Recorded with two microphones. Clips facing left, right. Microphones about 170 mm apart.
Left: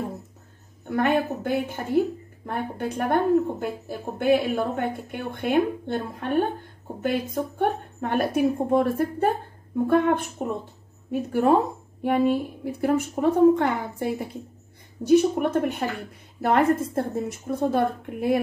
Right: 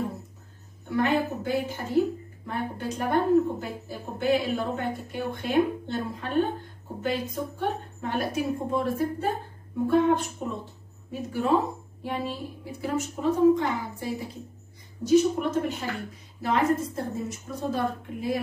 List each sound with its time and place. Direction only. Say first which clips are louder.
0.8 s a woman's voice: left 2 dB; 55° left (ahead or behind)